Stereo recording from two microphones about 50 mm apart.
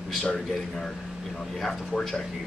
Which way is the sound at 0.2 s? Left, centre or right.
Centre.